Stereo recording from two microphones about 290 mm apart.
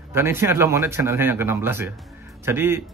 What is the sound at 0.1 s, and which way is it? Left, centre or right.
Speech, centre.